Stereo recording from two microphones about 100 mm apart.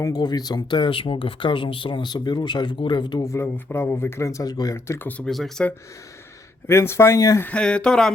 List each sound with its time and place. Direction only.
0.0 s speech: 40° left (ahead or behind)
3.2 s speech: 25° left (ahead or behind)
4.9 s speech: 15° left (ahead or behind)
5.2 s speech: 5° left (ahead or behind)
6.7 s speech: 25° left (ahead or behind)
7.4 s speech: 10° left (ahead or behind)